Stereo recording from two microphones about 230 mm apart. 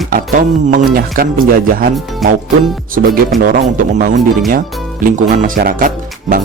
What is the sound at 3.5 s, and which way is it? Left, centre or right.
Speech, right.